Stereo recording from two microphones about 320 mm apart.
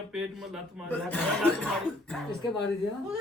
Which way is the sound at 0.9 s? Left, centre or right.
Centre.